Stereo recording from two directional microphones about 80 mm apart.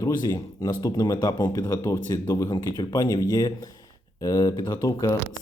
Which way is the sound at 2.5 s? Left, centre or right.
Left.